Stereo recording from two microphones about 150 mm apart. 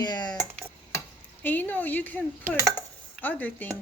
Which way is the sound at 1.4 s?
10° left (ahead or behind).